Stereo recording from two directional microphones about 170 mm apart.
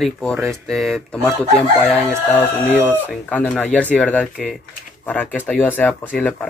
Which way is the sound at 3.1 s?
5° left (ahead or behind).